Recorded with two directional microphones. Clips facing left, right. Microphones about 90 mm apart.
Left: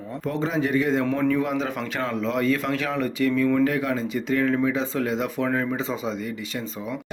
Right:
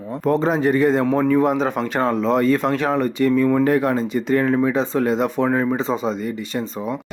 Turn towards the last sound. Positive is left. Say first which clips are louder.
# right 6 dB
turn(degrees=-30)  # may be behind; listen again after turning